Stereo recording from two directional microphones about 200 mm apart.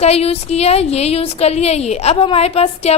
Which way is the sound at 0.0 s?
30° left (ahead or behind).